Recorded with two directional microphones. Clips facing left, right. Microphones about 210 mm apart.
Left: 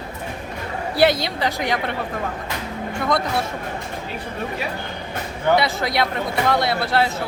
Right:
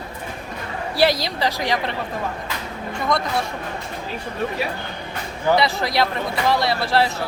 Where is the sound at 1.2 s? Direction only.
Centre (ahead or behind).